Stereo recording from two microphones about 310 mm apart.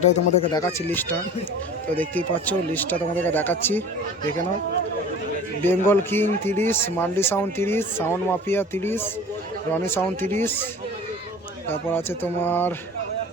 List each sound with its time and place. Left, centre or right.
0.0 s speech: left
0.6 s speech: centre
5.6 s speech: centre
11.7 s speech: centre